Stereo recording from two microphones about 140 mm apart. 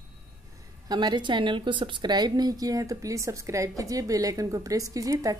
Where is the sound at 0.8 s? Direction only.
30° right (ahead or behind).